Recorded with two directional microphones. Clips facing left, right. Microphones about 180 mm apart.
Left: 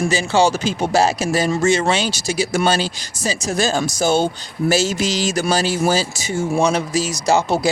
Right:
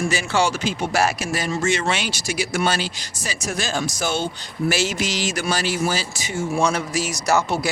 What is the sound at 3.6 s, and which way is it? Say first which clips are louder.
Speech: left 6 dB; 40° left (ahead or behind).